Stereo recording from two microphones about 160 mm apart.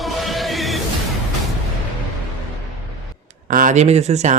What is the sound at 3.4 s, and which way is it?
Speech, 55° right (ahead or behind).